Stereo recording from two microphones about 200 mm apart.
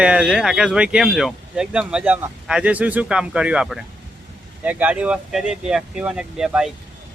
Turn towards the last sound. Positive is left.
turn(degrees=-5)  # may be behind; listen again after turning